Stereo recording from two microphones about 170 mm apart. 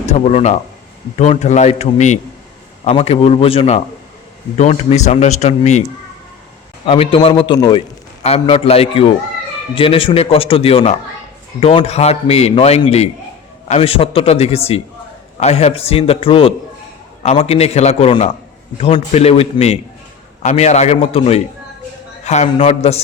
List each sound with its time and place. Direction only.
0.0 s a man's voice: 40° left (ahead or behind)
6.8 s a man's voice: 30° left (ahead or behind)